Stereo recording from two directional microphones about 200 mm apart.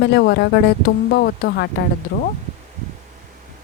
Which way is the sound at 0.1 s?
55° left (ahead or behind).